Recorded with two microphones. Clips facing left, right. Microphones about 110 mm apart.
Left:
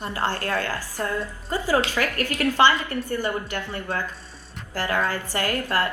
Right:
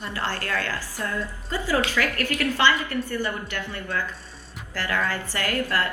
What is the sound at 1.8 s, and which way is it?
A woman's voice, 25° left (ahead or behind).